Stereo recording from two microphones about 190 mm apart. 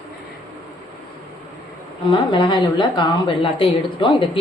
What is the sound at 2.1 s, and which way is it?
A woman's voice, 25° left (ahead or behind).